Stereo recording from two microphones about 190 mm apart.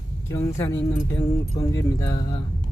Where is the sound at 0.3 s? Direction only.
15° left (ahead or behind).